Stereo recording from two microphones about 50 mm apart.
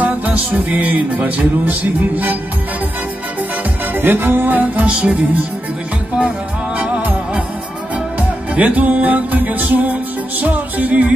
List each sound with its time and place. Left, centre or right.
0.0 s music: right
3.9 s music: right
4.8 s music: right
6.8 s music: right